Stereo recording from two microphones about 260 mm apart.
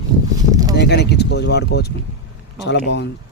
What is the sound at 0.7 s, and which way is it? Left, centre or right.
Speech, left.